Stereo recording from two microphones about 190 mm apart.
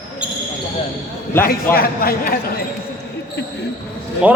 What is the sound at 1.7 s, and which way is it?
Speech, 50° left (ahead or behind).